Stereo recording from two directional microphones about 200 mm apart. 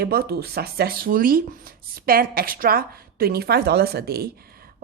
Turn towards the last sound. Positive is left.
turn(degrees=-50)  # may be behind; listen again after turning